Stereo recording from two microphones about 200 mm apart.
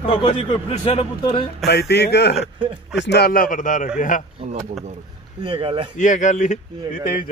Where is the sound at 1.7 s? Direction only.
55° left (ahead or behind).